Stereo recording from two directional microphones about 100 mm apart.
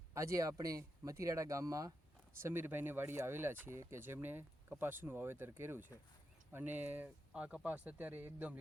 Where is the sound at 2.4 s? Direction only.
20° right (ahead or behind).